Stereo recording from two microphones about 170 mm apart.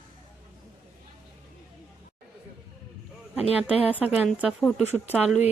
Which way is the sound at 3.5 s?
5° right (ahead or behind).